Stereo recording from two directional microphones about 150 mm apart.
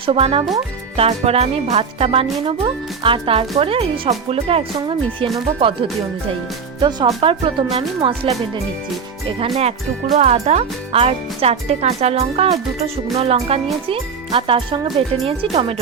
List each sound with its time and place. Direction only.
0.0 s speech: 40° right (ahead or behind)
10.2 s speech: 50° right (ahead or behind)